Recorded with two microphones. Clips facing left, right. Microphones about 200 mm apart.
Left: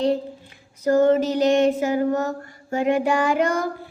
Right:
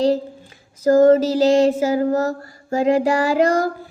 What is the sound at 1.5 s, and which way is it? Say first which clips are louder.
Mantra: right 3 dB; 30° right (ahead or behind).